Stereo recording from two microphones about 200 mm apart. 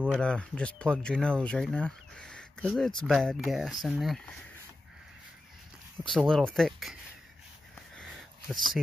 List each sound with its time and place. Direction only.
0.1 s speech: 5° left (ahead or behind)
6.0 s speech: 5° left (ahead or behind)
8.0 s a sound: centre (ahead or behind)